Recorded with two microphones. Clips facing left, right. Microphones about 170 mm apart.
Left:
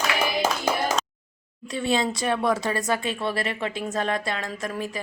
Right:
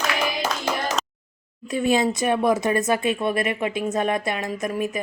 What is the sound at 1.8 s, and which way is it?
Speech, 20° right (ahead or behind).